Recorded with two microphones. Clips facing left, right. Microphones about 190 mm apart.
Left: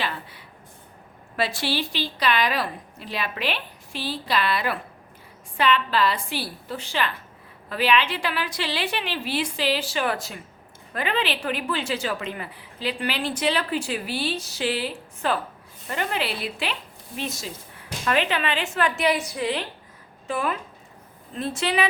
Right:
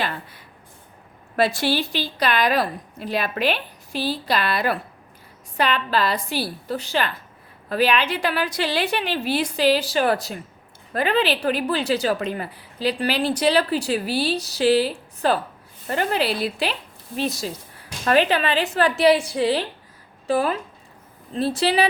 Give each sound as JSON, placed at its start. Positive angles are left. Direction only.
{"t": 1.4, "sound": "a woman's voice", "side_deg": -45}